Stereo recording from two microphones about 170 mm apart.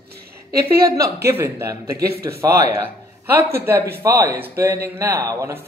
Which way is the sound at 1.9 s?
65° right (ahead or behind).